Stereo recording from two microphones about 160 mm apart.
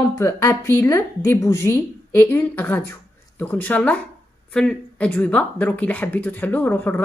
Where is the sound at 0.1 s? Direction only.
20° left (ahead or behind).